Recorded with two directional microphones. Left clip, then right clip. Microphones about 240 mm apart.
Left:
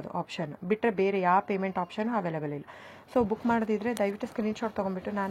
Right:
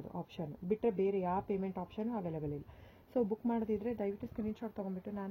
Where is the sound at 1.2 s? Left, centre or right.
Centre.